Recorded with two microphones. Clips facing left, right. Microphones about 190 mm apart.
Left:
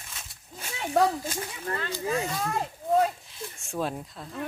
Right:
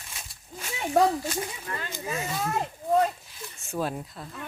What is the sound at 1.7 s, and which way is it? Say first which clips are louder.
Speech: left 4 dB; 35° left (ahead or behind).